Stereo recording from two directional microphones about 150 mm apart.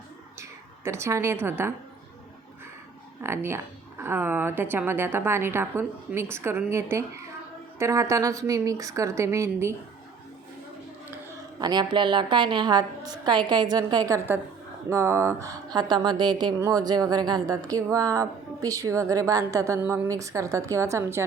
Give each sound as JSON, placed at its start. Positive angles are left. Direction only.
{"t": 0.9, "sound": "a woman's voice", "side_deg": -20}
{"t": 3.2, "sound": "a woman's voice", "side_deg": -15}
{"t": 11.6, "sound": "speech", "side_deg": -30}